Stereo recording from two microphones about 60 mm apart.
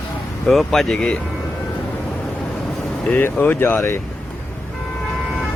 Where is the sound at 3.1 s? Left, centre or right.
Left.